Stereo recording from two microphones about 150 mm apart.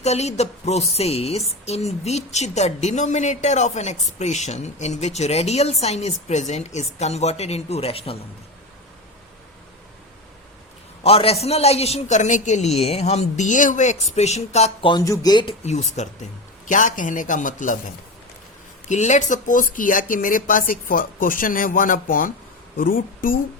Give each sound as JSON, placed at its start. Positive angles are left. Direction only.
{"t": 0.0, "sound": "speech", "side_deg": 45}
{"t": 11.0, "sound": "speech", "side_deg": 40}
{"t": 15.0, "sound": "speech", "side_deg": 25}
{"t": 15.6, "sound": "speech", "side_deg": 50}
{"t": 18.9, "sound": "speech", "side_deg": 50}